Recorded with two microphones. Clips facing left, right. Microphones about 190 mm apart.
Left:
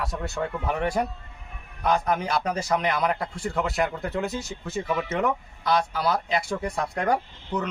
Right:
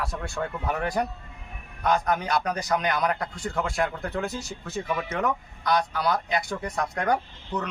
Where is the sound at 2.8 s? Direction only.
5° left (ahead or behind).